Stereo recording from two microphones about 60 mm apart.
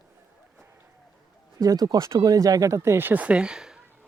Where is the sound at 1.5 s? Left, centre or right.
Right.